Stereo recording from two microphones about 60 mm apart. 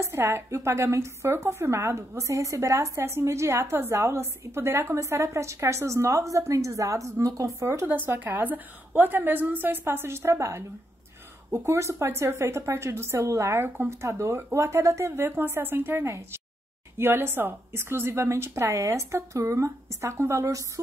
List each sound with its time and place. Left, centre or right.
0.0 s a woman's voice: right
4.9 s a woman's voice: right
7.6 s a woman's voice: right